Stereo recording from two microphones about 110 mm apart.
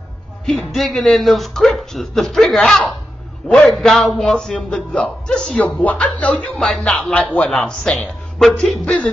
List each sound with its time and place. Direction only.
0.5 s a man's voice: centre (ahead or behind)